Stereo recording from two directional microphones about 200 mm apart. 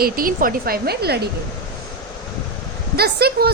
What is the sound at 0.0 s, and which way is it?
A woman's voice, 45° right (ahead or behind).